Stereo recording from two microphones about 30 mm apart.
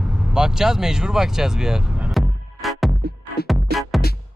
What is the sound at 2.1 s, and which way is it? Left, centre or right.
Music, centre.